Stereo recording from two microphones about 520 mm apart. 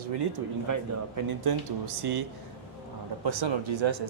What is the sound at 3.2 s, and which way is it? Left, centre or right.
Speech, right.